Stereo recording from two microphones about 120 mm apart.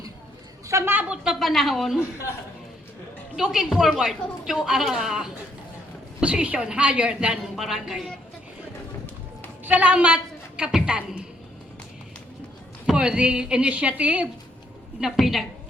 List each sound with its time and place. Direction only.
0.7 s a woman's voice: 20° right (ahead or behind)
1.1 s a woman's voice: 5° right (ahead or behind)
3.3 s a woman's voice: 5° right (ahead or behind)
9.6 s a woman's voice: 10° right (ahead or behind)
12.8 s a woman's voice: 5° right (ahead or behind)